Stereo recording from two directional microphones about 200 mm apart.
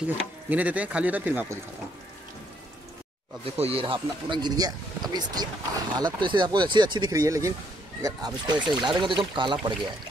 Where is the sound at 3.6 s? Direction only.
30° right (ahead or behind).